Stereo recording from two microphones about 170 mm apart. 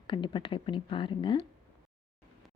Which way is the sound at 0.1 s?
30° left (ahead or behind).